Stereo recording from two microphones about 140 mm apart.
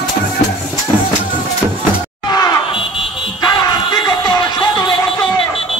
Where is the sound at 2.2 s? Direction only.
30° left (ahead or behind).